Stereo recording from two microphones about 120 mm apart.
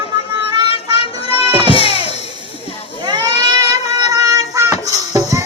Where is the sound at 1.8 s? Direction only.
55° left (ahead or behind).